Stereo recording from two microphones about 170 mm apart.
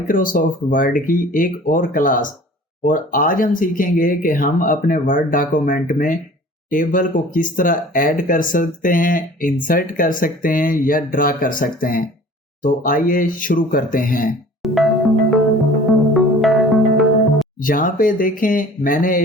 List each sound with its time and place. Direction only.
0.1 s speech: 55° left (ahead or behind)
14.6 s music: centre (ahead or behind)
17.6 s speech: 55° left (ahead or behind)